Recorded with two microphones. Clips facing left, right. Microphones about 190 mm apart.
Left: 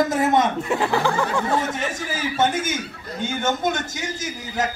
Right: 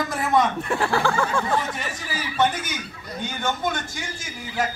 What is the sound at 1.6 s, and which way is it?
Speech, 45° left (ahead or behind).